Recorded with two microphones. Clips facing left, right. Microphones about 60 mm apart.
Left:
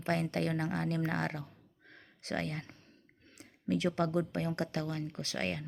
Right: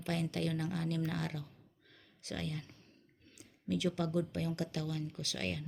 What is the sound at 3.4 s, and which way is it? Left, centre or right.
Speech, left.